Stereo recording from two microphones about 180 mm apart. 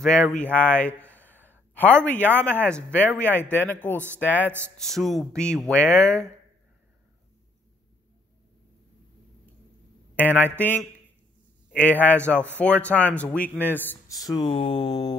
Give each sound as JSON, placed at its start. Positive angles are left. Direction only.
{"t": 0.0, "sound": "a man's voice", "side_deg": 0}
{"t": 4.5, "sound": "speech", "side_deg": -10}
{"t": 4.7, "sound": "speech", "side_deg": 0}
{"t": 10.1, "sound": "a man's voice", "side_deg": 10}
{"t": 14.2, "sound": "speech", "side_deg": 25}